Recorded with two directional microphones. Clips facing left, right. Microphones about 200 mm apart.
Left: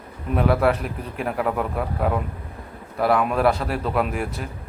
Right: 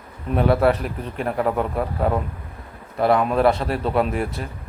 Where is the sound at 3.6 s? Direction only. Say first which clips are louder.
Right 2 dB; 20° right (ahead or behind).